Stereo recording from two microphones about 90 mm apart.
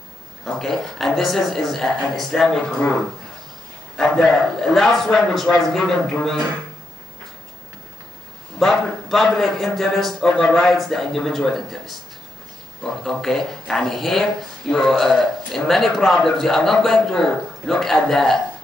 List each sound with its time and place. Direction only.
0.5 s speech: 5° left (ahead or behind)
3.9 s speech: 5° left (ahead or behind)
8.5 s speech: 5° left (ahead or behind)